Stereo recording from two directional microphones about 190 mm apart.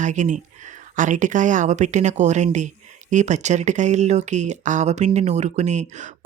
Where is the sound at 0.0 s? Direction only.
40° right (ahead or behind).